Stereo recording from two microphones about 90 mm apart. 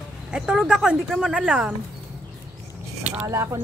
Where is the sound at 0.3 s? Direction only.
10° right (ahead or behind).